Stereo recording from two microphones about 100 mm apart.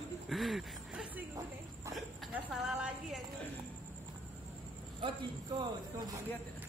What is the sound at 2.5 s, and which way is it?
Speech, 5° right (ahead or behind).